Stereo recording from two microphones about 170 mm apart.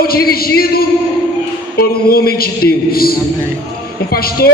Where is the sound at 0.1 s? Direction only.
65° left (ahead or behind).